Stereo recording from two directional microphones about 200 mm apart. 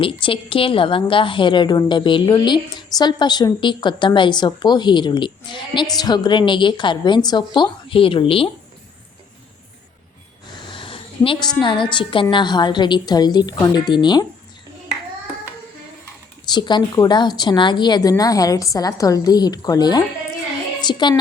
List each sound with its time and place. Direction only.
0.0 s a woman's voice: 25° left (ahead or behind)
10.6 s a sound: 25° left (ahead or behind)
11.6 s a woman's voice: 25° left (ahead or behind)
16.5 s a woman's voice: 20° left (ahead or behind)